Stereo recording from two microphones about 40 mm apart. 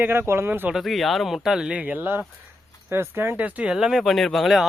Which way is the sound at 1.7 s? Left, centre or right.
Right.